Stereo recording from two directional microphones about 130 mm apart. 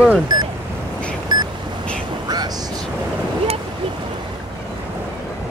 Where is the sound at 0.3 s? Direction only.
30° right (ahead or behind).